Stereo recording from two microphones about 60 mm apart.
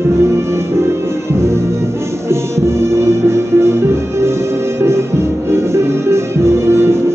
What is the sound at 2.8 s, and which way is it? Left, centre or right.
Music, right.